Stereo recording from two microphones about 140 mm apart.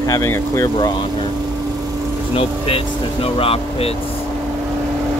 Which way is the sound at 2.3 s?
40° left (ahead or behind).